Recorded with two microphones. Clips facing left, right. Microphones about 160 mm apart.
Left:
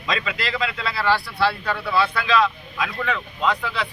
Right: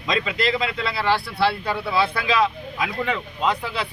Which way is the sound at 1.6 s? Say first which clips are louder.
Even; 10° right (ahead or behind).